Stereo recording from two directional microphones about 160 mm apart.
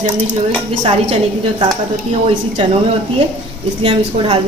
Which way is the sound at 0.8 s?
35° right (ahead or behind).